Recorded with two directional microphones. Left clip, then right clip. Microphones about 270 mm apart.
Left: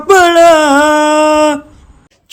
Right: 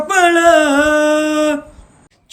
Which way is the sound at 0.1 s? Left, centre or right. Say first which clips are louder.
Left 5 dB; centre.